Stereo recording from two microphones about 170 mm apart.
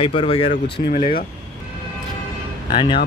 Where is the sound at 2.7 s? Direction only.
30° left (ahead or behind).